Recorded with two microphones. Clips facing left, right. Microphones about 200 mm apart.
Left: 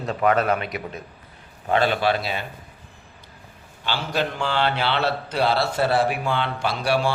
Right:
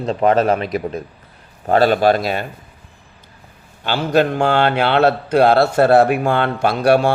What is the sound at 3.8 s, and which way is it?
A man's voice, 50° right (ahead or behind).